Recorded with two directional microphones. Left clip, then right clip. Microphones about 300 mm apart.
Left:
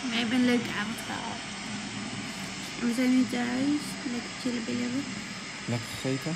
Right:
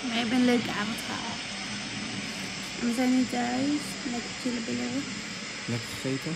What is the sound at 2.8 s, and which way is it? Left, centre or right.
Speech, left.